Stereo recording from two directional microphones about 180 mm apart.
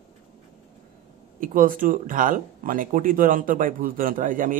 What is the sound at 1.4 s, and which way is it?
Speech, 50° right (ahead or behind).